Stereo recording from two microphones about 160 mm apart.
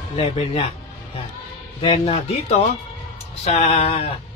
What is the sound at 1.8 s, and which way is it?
Speech, 35° left (ahead or behind).